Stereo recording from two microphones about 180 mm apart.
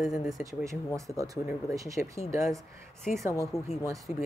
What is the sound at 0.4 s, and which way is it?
Speech, 15° right (ahead or behind).